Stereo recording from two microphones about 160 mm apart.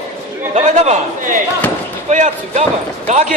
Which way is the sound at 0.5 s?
45° right (ahead or behind).